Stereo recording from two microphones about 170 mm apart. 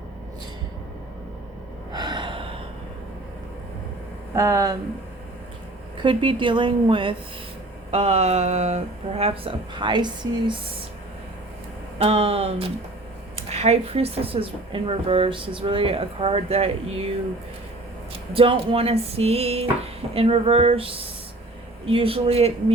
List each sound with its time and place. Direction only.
1.9 s gasp: 25° right (ahead or behind)
4.4 s a woman's voice: 20° right (ahead or behind)
6.0 s a woman's voice: 30° right (ahead or behind)
11.9 s speech: 35° right (ahead or behind)
18.3 s speech: 30° right (ahead or behind)